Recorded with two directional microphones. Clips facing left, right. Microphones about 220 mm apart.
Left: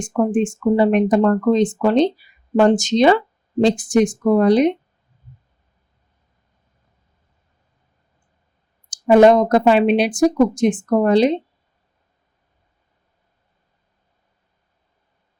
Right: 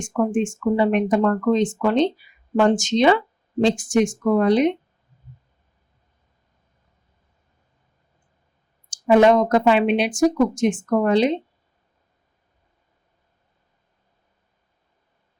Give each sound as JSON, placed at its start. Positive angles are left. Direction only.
{"t": 0.0, "sound": "speech", "side_deg": 35}
{"t": 8.9, "sound": "speech", "side_deg": 35}